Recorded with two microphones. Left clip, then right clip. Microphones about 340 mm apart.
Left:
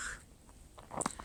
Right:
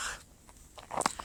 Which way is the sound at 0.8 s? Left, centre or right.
Right.